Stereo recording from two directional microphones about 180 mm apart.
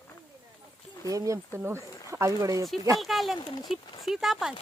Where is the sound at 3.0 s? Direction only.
Centre (ahead or behind).